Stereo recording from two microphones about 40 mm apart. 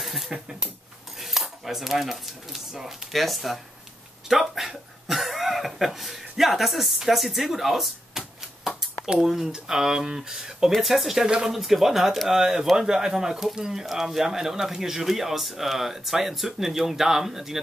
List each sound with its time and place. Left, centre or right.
0.0 s speech: centre
1.2 s cutlery: centre
4.3 s speech: centre
11.2 s speech: right
11.5 s speech: centre